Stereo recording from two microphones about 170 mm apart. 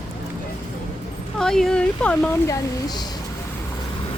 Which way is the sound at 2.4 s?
20° left (ahead or behind).